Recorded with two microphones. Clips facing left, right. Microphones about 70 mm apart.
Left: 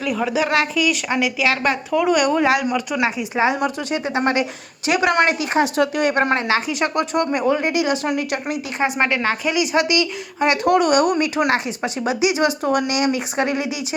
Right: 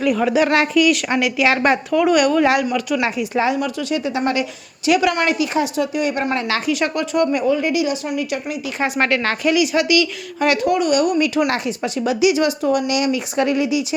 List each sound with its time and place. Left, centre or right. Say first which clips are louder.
0.0 s speech: right 4 dB; centre
2.1 s a woman's voice: right 2 dB; left
3.8 s a woman's voice: right 1 dB; left
6.7 s a woman's voice: right 1 dB; left
8.8 s a woman's voice: right 1 dB; left
9.6 s speech: right 1 dB; left
10.6 s a woman's voice: left 4 dB; left
11.2 s speech: right 1 dB; left
11.8 s speech: right 2 dB; left